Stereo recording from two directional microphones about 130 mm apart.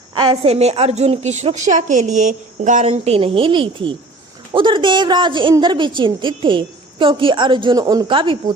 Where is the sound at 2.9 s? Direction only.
45° right (ahead or behind).